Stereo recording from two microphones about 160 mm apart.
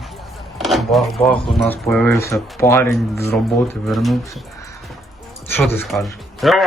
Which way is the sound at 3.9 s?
Centre (ahead or behind).